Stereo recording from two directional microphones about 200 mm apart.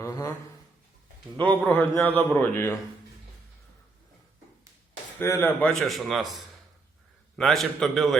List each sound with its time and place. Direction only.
0.0 s speech: 15° left (ahead or behind)
1.4 s a man's voice: 5° left (ahead or behind)
5.2 s a man's voice: 15° left (ahead or behind)